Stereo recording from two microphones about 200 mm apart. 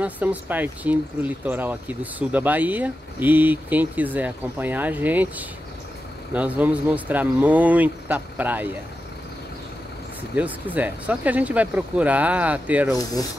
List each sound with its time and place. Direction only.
0.0 s speech: 10° right (ahead or behind)
6.3 s speech: 5° right (ahead or behind)
10.3 s speech: 10° right (ahead or behind)
12.9 s speech: 20° left (ahead or behind)